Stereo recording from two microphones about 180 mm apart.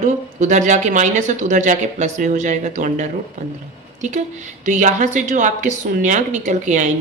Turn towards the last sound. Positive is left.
turn(degrees=-45)  # may be behind; listen again after turning